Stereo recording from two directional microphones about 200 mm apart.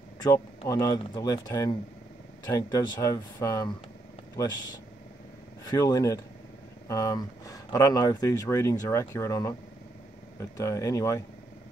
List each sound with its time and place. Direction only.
0.7 s speech: 20° left (ahead or behind)
5.7 s speech: 20° left (ahead or behind)
10.6 s speech: 15° left (ahead or behind)